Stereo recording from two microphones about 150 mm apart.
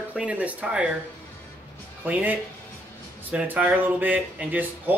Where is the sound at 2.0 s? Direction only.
10° right (ahead or behind).